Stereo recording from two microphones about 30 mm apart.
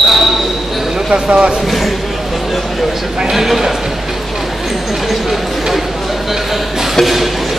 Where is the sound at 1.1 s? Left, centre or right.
Right.